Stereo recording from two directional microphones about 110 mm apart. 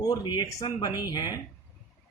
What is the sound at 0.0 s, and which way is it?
Speech, 35° left (ahead or behind).